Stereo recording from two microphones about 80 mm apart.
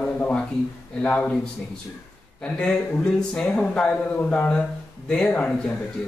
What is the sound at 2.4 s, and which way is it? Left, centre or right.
Speech, centre.